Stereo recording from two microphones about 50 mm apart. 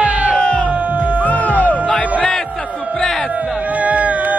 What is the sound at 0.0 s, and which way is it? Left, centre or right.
Music, right.